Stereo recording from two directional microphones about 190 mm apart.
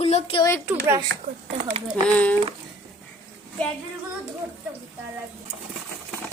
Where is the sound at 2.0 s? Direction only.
5° left (ahead or behind).